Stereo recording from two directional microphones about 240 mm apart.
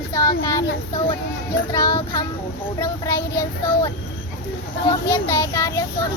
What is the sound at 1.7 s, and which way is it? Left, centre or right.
Speech, centre.